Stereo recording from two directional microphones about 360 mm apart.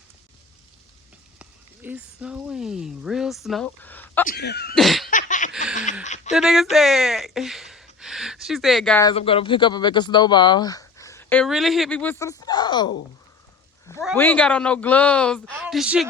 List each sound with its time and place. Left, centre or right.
1.4 s speech: centre
4.3 s cough: left
4.7 s laughter: centre
5.1 s a sound: left
6.3 s speech: centre